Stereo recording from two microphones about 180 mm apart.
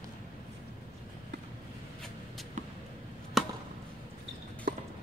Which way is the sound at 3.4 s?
Centre (ahead or behind).